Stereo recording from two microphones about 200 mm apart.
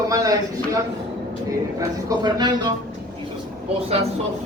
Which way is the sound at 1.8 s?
20° right (ahead or behind).